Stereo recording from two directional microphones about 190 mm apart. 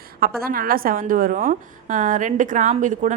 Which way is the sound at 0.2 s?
50° right (ahead or behind).